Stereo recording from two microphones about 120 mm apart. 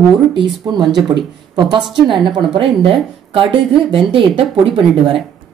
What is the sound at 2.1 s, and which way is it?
Speech, 40° right (ahead or behind).